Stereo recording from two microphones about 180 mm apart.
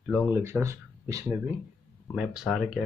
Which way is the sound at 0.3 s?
15° right (ahead or behind).